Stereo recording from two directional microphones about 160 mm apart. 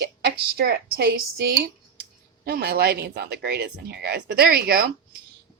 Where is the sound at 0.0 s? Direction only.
90° right.